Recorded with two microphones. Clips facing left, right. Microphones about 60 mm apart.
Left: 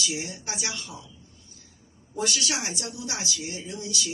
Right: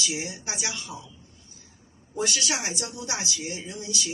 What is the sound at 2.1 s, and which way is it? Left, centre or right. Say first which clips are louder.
A woman's voice: right 1 dB; right.